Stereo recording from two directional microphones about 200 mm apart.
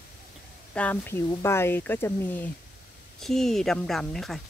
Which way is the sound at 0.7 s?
10° left (ahead or behind).